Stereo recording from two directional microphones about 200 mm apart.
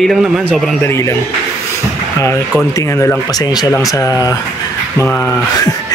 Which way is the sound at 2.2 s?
15° left (ahead or behind).